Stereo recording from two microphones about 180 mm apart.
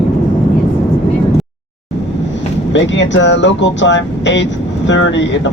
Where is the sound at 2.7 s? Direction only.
85° left.